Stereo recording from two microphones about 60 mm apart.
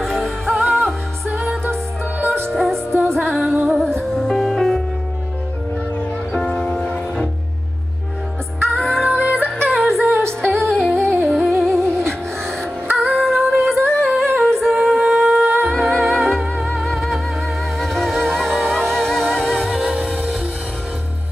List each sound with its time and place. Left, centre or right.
0.0 s music: centre
2.5 s music: centre
6.3 s music: centre
8.6 s music: centre
9.2 s music: right
9.8 s music: centre
11.8 s music: right
12.9 s music: centre
14.3 s humming: centre
15.6 s music: centre
19.9 s music: centre